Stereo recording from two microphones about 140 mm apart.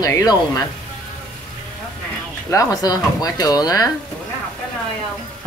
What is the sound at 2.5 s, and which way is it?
Speech, 30° left (ahead or behind).